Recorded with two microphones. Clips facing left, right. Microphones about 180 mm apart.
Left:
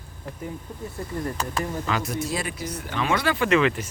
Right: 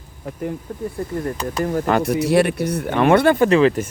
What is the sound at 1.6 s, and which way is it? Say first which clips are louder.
Speech: right 10 dB; 55° right (ahead or behind).